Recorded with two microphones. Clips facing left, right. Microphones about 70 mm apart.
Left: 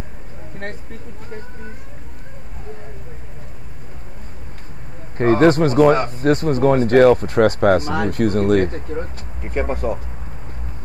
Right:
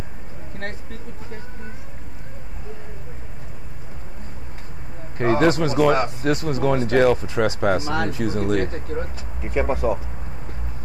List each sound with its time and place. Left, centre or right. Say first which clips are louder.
5.4 s speech: left 6 dB; left
5.9 s speech: left 1 dB; centre
6.2 s speech: left 10 dB; left
8.8 s speech: left 2 dB; centre